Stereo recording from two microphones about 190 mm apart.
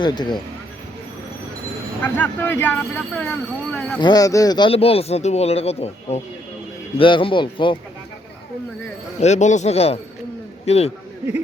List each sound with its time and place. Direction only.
0.0 s speech: 25° left (ahead or behind)
2.0 s speech: 10° left (ahead or behind)
4.0 s speech: 20° left (ahead or behind)
9.2 s speech: 40° left (ahead or behind)